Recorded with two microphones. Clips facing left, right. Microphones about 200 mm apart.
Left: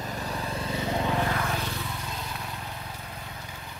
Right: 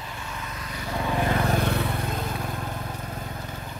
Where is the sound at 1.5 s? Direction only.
60° right (ahead or behind).